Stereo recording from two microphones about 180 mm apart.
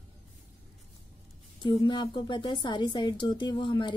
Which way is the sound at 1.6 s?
25° left (ahead or behind).